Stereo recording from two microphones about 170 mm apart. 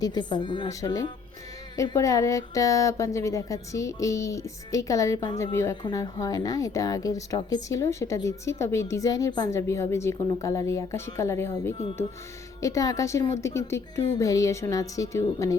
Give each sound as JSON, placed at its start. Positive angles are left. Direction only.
{"t": 0.0, "sound": "speech", "side_deg": 25}